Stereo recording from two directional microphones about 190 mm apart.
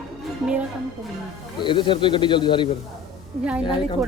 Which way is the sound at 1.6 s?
25° left (ahead or behind).